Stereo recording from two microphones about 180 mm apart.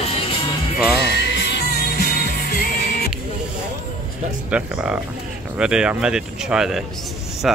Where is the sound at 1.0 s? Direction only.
70° left (ahead or behind).